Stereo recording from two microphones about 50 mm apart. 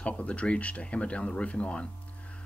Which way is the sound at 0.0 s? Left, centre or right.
Left.